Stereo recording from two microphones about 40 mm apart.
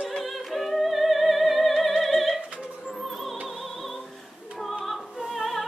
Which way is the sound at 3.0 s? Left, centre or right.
Centre.